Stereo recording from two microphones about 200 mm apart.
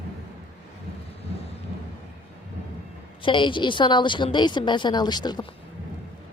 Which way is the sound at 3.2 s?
25° left (ahead or behind).